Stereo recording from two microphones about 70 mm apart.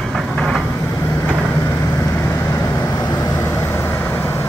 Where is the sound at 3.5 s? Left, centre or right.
Left.